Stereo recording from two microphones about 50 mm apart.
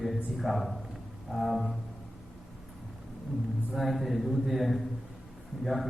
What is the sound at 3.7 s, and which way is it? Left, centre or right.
A man's voice, centre.